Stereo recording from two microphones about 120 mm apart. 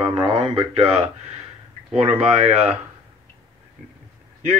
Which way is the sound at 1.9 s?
15° right (ahead or behind).